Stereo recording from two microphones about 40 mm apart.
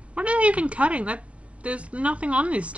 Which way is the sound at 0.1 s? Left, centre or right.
Right.